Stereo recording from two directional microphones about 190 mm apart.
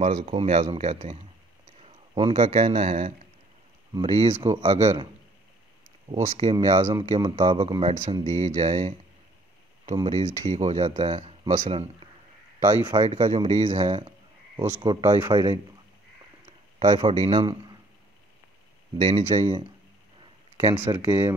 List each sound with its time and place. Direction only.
0.1 s speech: 35° right (ahead or behind)
6.0 s speech: 35° right (ahead or behind)
9.9 s speech: 35° right (ahead or behind)
12.9 s speech: 30° right (ahead or behind)
16.8 s speech: 30° right (ahead or behind)
18.9 s speech: 30° right (ahead or behind)
20.5 s speech: 15° right (ahead or behind)